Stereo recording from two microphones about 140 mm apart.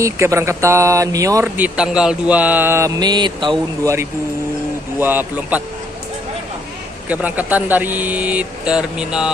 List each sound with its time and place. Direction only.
0.0 s speech: 20° right (ahead or behind)
1.6 s speech: 5° right (ahead or behind); by 3.5 s 35° right (ahead or behind)
3.8 s speech: 20° right (ahead or behind)
7.1 s speech: 10° right (ahead or behind)